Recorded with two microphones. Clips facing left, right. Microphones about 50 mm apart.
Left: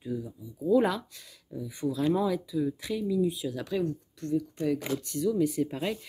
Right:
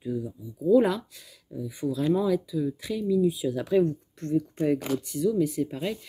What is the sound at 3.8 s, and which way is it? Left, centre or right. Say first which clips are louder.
Speech: right 5 dB; right.